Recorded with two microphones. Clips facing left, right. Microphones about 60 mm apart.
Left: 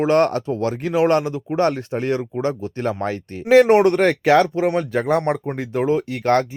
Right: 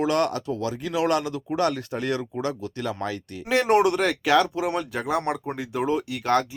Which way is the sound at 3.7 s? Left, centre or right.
Left.